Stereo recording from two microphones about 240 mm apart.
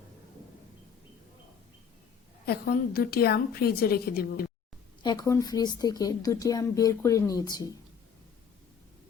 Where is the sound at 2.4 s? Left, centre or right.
Left.